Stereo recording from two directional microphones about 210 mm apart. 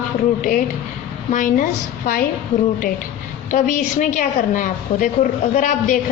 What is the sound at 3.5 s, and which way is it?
A woman's voice, 35° left (ahead or behind).